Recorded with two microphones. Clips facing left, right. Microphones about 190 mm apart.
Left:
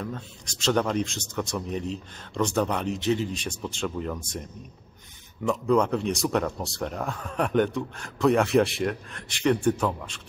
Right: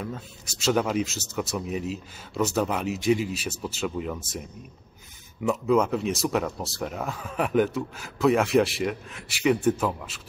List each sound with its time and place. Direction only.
0.0 s speech: 5° right (ahead or behind)